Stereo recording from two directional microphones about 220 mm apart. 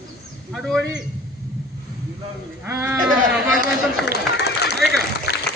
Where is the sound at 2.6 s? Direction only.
10° right (ahead or behind).